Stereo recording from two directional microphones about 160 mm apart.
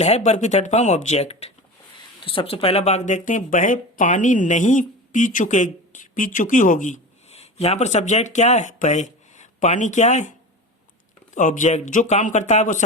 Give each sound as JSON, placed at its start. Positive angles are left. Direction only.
{"t": 0.0, "sound": "speech", "side_deg": 45}
{"t": 11.3, "sound": "speech", "side_deg": 50}